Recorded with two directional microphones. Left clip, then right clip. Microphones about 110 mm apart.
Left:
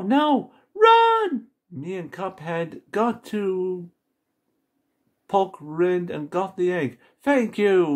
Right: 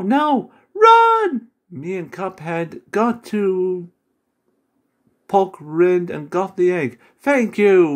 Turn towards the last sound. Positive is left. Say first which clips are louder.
# right 6 dB
turn(degrees=-25)  # may be behind; listen again after turning